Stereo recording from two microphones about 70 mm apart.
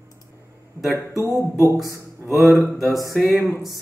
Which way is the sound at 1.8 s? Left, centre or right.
Right.